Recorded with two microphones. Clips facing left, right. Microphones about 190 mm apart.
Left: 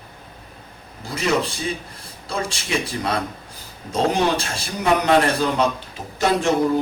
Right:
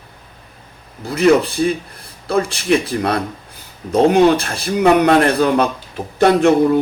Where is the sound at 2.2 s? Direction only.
60° right (ahead or behind).